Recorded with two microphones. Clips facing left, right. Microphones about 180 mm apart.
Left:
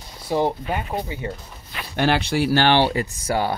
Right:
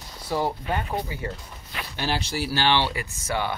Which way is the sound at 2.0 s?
60° left (ahead or behind).